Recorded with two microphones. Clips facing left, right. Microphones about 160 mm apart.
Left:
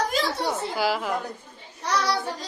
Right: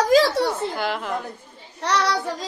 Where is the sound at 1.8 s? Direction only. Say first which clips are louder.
Right 3 dB; 80° right.